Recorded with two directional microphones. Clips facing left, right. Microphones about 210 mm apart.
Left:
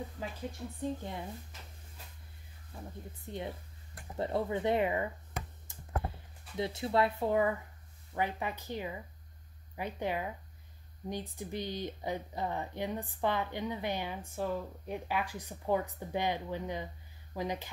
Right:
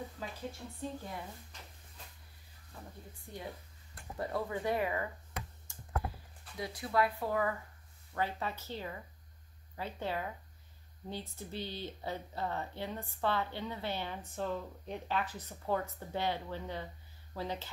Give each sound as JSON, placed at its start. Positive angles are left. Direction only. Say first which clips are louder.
{"t": 0.7, "sound": "a woman's voice", "louder": "left 6 dB", "side_deg": 20}
{"t": 2.7, "sound": "a woman's voice", "louder": "left 4 dB", "side_deg": 20}
{"t": 5.7, "sound": "a sound", "louder": "even", "side_deg": 25}
{"t": 8.1, "sound": "speech", "louder": "left 2 dB", "side_deg": 15}